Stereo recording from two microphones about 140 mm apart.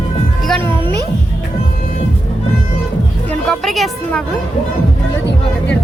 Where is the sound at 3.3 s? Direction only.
5° left (ahead or behind).